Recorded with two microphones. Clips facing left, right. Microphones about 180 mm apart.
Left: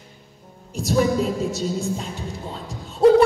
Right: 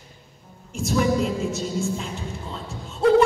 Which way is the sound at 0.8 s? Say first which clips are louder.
Left 2 dB; 35° left (ahead or behind).